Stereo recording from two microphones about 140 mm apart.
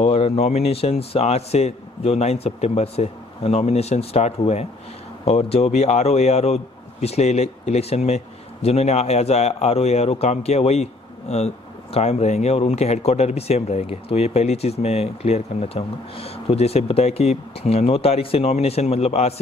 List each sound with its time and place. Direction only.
0.0 s a man's voice: 45° left (ahead or behind)